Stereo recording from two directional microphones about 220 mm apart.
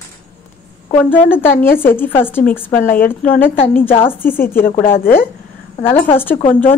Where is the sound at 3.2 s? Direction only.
10° left (ahead or behind).